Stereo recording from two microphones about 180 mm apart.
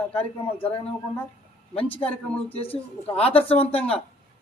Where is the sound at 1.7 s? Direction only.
30° left (ahead or behind).